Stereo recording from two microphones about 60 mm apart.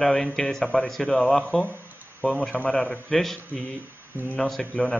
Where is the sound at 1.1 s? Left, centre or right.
Left.